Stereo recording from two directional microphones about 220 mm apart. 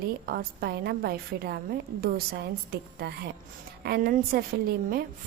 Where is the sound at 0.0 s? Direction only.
45° right (ahead or behind).